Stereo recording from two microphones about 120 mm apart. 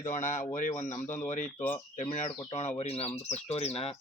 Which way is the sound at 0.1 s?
90° left.